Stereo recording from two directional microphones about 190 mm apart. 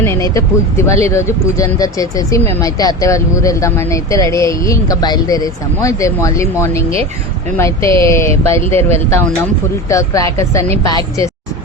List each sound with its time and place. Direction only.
0.0 s speech: 15° left (ahead or behind)